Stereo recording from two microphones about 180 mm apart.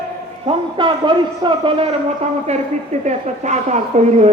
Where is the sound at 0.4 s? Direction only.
25° right (ahead or behind).